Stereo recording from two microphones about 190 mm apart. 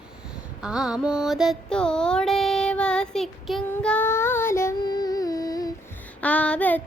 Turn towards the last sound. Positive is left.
turn(degrees=10)  # may be behind; listen again after turning